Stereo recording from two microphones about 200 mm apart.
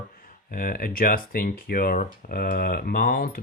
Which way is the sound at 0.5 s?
45° left (ahead or behind).